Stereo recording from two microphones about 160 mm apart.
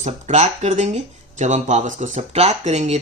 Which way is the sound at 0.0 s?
45° right (ahead or behind).